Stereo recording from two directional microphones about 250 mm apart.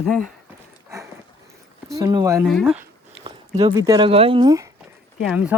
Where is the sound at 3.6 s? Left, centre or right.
Centre.